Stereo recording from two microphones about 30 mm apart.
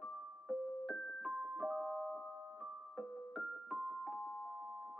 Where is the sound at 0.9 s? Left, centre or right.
Left.